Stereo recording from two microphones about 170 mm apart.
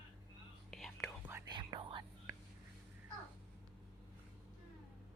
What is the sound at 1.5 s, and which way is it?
Whispering, 25° right (ahead or behind).